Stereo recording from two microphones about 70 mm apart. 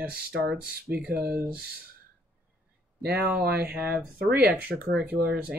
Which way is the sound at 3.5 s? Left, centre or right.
Centre.